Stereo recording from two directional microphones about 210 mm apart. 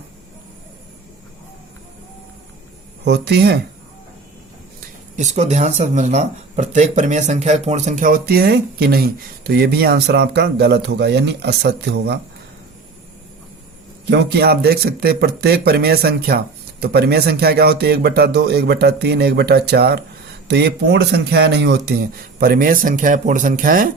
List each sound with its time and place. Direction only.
3.0 s speech: 55° right (ahead or behind)
5.1 s speech: 35° right (ahead or behind); by 12.2 s 50° right (ahead or behind)
14.1 s speech: 55° right (ahead or behind)